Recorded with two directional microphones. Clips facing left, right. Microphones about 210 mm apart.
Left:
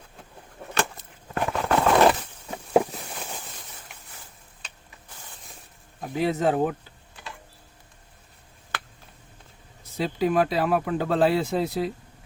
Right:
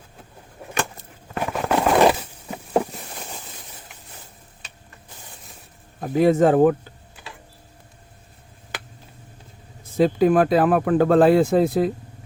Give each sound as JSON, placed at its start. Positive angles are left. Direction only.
{"t": 1.3, "sound": "a sound", "side_deg": 0}
{"t": 1.8, "sound": "crushing", "side_deg": -10}
{"t": 6.0, "sound": "speech", "side_deg": -50}
{"t": 9.8, "sound": "speech", "side_deg": -50}